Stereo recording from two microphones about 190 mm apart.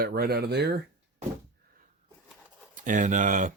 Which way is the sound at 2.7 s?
40° right (ahead or behind).